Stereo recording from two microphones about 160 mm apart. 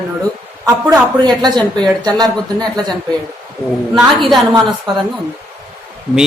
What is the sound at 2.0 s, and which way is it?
Speech, 25° right (ahead or behind).